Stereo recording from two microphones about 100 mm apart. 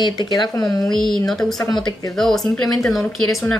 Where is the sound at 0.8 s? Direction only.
5° left (ahead or behind).